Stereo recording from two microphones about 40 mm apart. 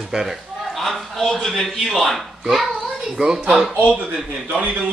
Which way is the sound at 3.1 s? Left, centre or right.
Centre.